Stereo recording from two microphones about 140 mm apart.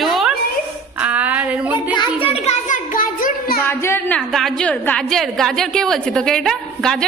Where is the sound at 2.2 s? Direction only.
45° left (ahead or behind); by 3.6 s 85° left.